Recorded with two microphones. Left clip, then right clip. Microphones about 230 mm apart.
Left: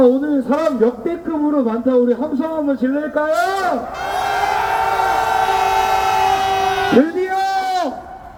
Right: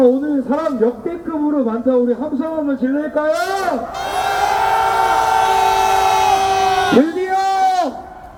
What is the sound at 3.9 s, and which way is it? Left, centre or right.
Vehicle, right.